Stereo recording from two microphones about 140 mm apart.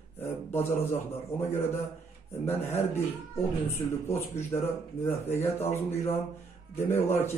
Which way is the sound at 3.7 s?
15° left (ahead or behind).